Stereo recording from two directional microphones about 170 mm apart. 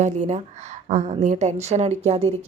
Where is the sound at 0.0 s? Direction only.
40° right (ahead or behind).